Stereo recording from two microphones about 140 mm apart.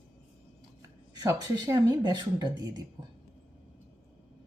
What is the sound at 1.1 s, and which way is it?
Speech, 25° right (ahead or behind).